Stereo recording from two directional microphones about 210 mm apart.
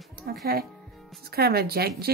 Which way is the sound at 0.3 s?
50° right (ahead or behind).